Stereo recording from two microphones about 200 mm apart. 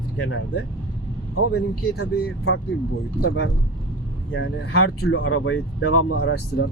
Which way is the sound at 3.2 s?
80° left.